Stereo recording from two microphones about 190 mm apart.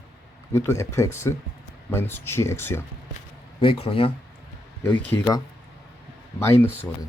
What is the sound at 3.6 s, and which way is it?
Speech, 30° left (ahead or behind).